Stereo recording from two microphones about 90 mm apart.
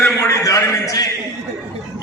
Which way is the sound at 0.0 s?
30° left (ahead or behind).